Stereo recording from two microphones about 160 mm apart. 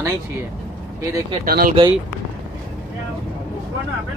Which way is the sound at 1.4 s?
70° right (ahead or behind).